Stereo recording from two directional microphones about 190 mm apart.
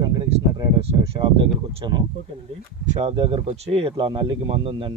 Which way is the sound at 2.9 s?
30° right (ahead or behind).